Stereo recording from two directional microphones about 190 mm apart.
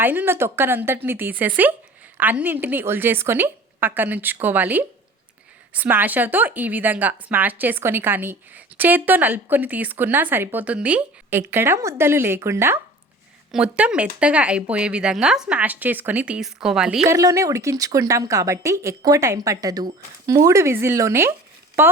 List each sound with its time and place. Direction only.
0.0 s speech: 10° right (ahead or behind)
17.1 s a woman's voice: 15° right (ahead or behind)